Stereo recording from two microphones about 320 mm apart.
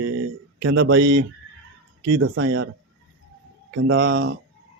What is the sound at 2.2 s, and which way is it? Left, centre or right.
Speech, right.